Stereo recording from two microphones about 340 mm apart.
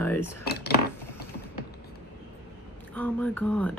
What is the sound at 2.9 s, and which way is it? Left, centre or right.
Speech, centre.